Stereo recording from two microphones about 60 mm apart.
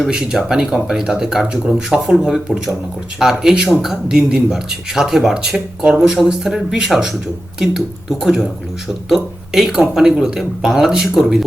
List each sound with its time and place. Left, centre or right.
0.1 s speech: centre
8.2 s speech: centre